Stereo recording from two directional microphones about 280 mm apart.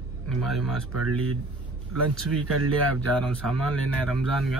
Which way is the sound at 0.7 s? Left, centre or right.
Right.